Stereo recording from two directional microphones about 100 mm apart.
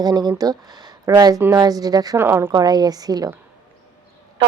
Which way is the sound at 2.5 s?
40° right (ahead or behind).